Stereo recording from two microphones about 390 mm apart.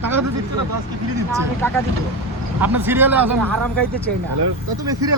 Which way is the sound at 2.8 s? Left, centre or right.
Centre.